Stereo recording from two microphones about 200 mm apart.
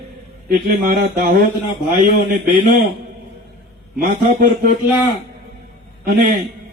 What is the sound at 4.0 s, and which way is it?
Speech, 50° right (ahead or behind).